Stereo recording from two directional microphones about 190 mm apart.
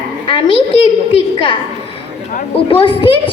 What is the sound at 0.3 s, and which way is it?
Speech, 25° left (ahead or behind).